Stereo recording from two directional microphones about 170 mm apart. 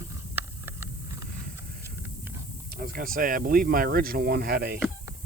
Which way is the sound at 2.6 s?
60° right (ahead or behind).